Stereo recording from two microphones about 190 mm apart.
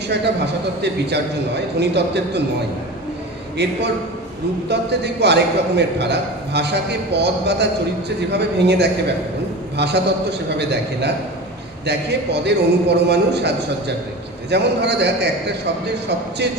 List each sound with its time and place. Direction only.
0.1 s a man's voice: 60° right (ahead or behind)
3.6 s a man's voice: 60° right (ahead or behind)
16.4 s a man's voice: 60° right (ahead or behind)